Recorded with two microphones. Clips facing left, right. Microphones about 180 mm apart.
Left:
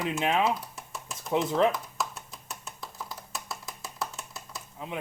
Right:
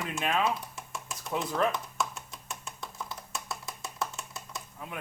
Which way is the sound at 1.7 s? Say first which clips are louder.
Right 1 dB; centre (ahead or behind).